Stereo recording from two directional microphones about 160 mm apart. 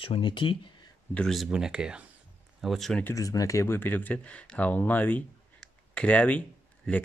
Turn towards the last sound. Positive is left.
turn(degrees=10)  # may be behind; listen again after turning